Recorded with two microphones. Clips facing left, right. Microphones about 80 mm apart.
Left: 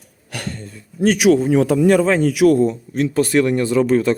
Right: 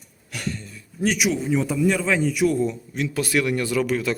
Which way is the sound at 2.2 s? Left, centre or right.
Left.